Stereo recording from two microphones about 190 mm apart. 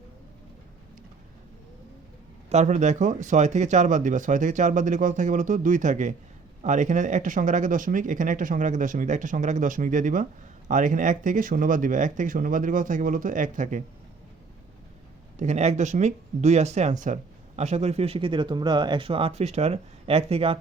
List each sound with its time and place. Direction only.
2.5 s speech: 35° right (ahead or behind)
15.4 s speech: 35° right (ahead or behind)